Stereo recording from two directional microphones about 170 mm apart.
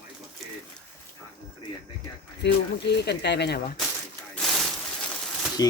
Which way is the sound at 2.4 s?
85° left.